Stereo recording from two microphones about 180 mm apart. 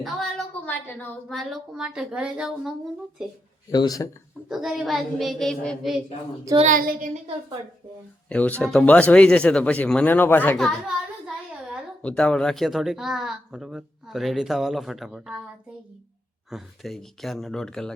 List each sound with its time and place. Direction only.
0.0 s a woman's voice: centre (ahead or behind)
3.7 s a man's voice: 20° left (ahead or behind)
4.4 s speech: centre (ahead or behind)
6.6 s child singing: 50° right (ahead or behind)
8.3 s speech: 10° left (ahead or behind)
12.0 s speech: 5° left (ahead or behind)
16.5 s speech: centre (ahead or behind)